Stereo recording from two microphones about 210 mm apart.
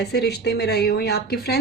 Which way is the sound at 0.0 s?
50° left (ahead or behind).